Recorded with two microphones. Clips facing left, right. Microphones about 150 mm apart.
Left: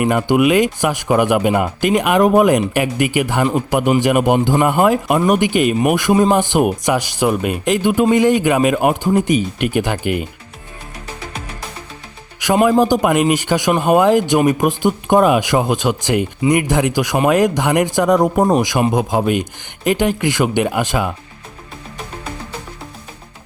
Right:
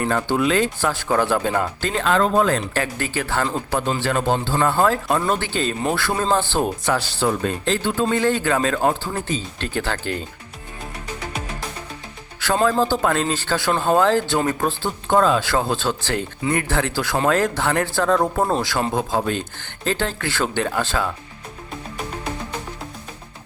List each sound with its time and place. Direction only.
0.0 s speech: 15° left (ahead or behind)
12.4 s speech: 15° left (ahead or behind)